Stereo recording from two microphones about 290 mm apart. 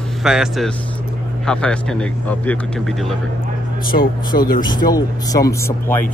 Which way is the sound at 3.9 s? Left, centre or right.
Left.